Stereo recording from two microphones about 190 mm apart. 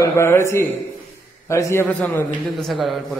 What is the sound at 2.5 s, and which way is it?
Speech, centre (ahead or behind).